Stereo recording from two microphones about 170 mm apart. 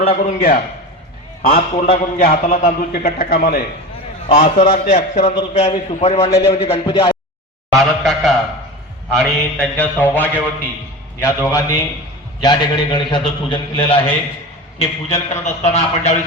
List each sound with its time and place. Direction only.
0.0 s a man's voice: 35° left (ahead or behind)
2.2 s a man's voice: 55° left (ahead or behind)
4.3 s a man's voice: 35° left (ahead or behind)
6.3 s a man's voice: 20° left (ahead or behind)
6.6 s a man's voice: 35° left (ahead or behind)
7.7 s a sound: centre (ahead or behind)
9.1 s mantra: 5° left (ahead or behind)
12.4 s a man's voice: 25° left (ahead or behind)